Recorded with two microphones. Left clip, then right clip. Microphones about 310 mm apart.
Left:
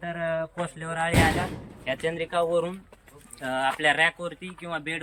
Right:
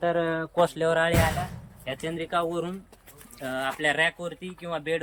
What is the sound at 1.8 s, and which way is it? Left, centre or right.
Speech, centre.